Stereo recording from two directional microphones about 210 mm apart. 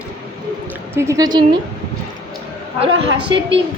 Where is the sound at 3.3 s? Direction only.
20° right (ahead or behind).